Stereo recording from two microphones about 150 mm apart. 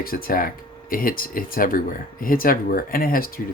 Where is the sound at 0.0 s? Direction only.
75° left (ahead or behind).